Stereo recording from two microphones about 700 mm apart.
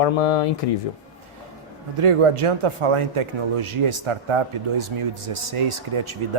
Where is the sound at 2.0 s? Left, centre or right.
Right.